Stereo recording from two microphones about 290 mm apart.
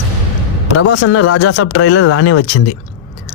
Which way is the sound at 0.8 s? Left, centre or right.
Left.